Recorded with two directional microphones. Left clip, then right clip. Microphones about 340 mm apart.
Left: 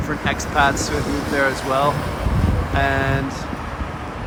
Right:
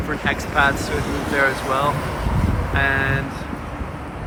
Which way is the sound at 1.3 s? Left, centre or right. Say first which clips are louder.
Even; centre.